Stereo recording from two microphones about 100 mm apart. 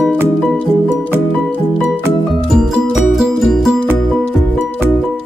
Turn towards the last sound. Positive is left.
turn(degrees=-5)  # may be behind; listen again after turning